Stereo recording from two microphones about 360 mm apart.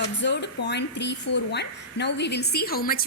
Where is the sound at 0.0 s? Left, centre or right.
Left.